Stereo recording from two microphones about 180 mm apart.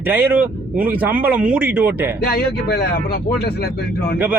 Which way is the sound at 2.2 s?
60° left (ahead or behind).